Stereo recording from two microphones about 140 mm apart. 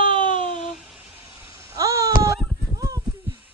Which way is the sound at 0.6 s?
Centre (ahead or behind).